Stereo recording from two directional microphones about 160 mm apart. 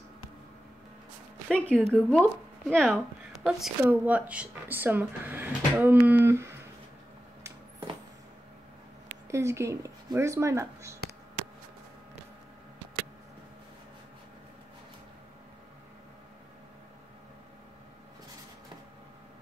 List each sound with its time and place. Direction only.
1.5 s speech: 5° left (ahead or behind)
3.6 s speech: 10° right (ahead or behind)
9.3 s speech: 15° right (ahead or behind)